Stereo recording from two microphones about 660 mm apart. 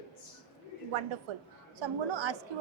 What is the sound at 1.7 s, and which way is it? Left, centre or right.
Speech, right.